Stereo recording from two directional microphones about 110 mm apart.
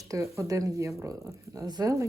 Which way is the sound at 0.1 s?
30° right (ahead or behind).